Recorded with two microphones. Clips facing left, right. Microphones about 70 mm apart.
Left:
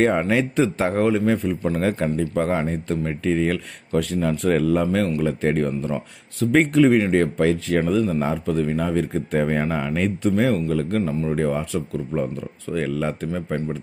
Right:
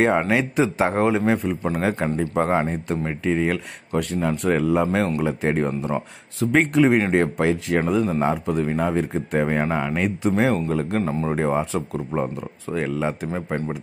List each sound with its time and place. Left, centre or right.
0.0 s speech: centre
0.9 s speech: right
4.0 s speech: centre
4.8 s speech: right
5.2 s speech: centre
6.5 s speech: centre
6.9 s speech: right
9.1 s speech: centre
10.3 s speech: right
12.4 s speech: centre
13.3 s speech: right